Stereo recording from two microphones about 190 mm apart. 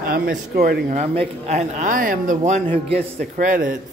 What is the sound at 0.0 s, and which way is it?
Speech, 50° right (ahead or behind).